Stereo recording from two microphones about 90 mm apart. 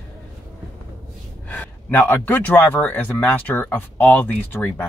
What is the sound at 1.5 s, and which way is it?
Speech, 20° left (ahead or behind).